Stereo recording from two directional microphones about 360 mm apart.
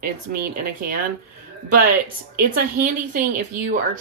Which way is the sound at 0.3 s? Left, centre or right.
Right.